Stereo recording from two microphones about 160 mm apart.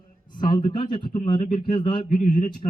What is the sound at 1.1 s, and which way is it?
Speech, 55° left (ahead or behind).